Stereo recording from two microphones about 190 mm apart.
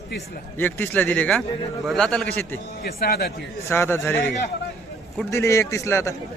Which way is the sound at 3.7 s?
10° left (ahead or behind).